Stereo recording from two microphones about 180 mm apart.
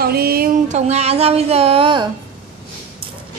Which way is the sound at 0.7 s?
35° right (ahead or behind).